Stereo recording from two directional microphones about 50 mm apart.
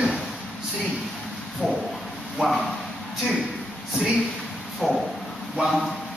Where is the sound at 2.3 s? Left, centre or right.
Centre.